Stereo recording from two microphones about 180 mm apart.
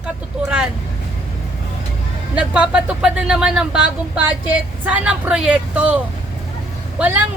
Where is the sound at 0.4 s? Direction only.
5° right (ahead or behind).